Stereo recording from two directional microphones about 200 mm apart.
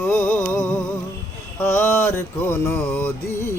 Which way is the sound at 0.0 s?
10° left (ahead or behind).